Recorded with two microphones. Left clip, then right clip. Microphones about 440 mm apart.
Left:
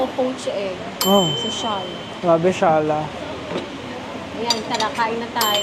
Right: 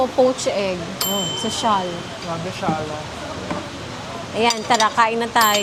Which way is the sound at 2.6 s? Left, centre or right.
Left.